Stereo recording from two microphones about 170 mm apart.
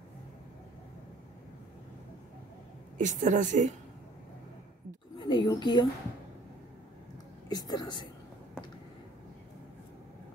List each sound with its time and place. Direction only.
3.0 s a woman's voice: 45° right (ahead or behind)
5.2 s a sound: 25° left (ahead or behind)
7.4 s a woman's voice: 25° left (ahead or behind)